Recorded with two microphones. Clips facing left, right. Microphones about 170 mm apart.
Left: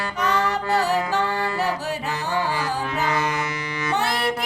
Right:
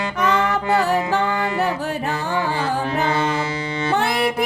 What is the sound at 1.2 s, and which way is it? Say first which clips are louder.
Music: right 3 dB; 20° right (ahead or behind).